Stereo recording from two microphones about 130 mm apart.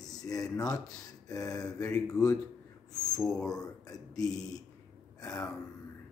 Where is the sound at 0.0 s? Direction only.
30° left (ahead or behind).